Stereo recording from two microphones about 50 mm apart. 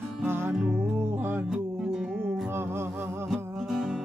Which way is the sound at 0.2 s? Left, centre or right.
Right.